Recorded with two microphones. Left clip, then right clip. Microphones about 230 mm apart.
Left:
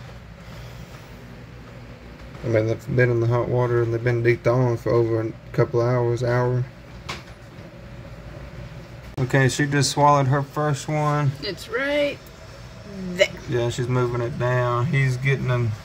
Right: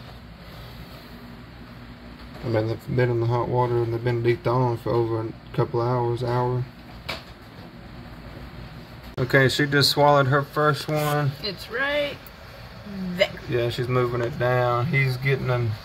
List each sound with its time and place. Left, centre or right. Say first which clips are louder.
2.5 s speech: left 4 dB; centre
9.3 s speech: right 2 dB; centre
11.4 s speech: left 1 dB; left
13.5 s speech: even; centre